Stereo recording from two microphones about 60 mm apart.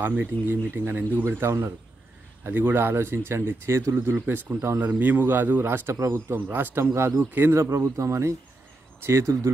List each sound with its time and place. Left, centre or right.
0.2 s a man's voice: right
1.4 s speech: right
2.4 s a man's voice: right
4.3 s a man's voice: right
6.9 s a man's voice: right
7.2 s a man's voice: right
7.7 s a man's voice: right